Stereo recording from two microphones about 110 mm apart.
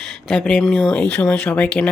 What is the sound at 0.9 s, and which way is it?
Speech, 10° left (ahead or behind).